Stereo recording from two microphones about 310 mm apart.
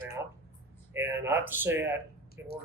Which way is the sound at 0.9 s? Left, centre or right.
Centre.